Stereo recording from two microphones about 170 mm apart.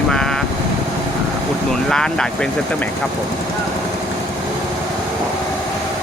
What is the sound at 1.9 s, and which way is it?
Speech, 5° left (ahead or behind).